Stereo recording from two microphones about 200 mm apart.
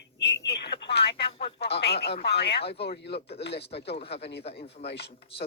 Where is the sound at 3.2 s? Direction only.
30° left (ahead or behind).